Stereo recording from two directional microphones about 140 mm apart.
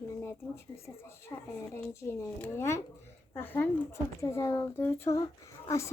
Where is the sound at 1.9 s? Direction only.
15° left (ahead or behind).